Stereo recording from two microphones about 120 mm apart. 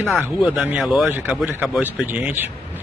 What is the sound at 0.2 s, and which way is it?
Speech, 10° right (ahead or behind).